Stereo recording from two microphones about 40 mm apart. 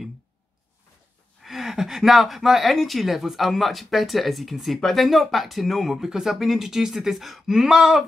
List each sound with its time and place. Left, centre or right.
1.4 s gasp: centre
2.7 s speech: centre